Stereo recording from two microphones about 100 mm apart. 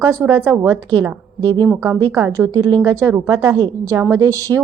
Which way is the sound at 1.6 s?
25° right (ahead or behind).